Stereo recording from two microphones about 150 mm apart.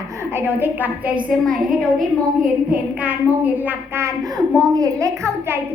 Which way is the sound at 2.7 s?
10° right (ahead or behind).